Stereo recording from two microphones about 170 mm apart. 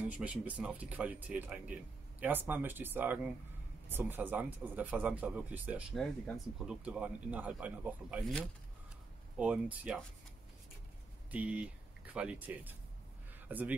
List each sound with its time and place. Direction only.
0.0 s speech: 10° right (ahead or behind)
9.4 s speech: 10° right (ahead or behind)
11.3 s a man's voice: 10° right (ahead or behind)